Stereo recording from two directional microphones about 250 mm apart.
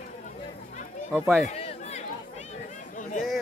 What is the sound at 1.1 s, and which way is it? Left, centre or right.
Speech, centre.